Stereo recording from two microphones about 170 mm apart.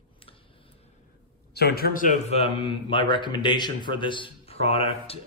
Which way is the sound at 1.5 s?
65° left (ahead or behind).